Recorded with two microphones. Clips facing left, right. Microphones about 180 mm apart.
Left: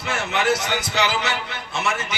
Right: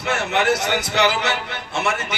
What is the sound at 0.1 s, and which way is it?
A man's voice, 60° right (ahead or behind).